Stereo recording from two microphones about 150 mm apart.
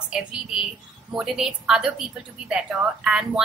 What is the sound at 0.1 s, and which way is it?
A woman's voice, 5° right (ahead or behind).